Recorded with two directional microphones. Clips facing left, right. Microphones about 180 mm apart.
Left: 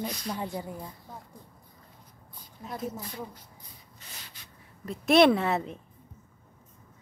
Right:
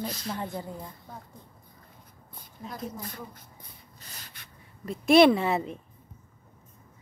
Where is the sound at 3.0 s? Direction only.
50° right (ahead or behind).